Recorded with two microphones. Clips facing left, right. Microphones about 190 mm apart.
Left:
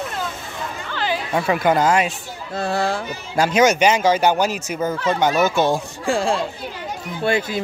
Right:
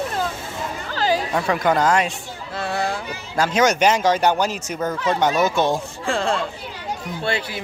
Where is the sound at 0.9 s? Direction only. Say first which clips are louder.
Right 4 dB; 40° right (ahead or behind).